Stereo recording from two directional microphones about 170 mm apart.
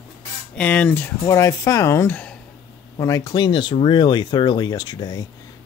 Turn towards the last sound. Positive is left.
turn(degrees=25)  # may be behind; listen again after turning